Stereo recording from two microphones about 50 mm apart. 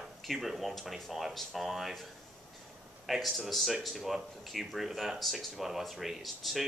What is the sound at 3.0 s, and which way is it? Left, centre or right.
Speech, centre.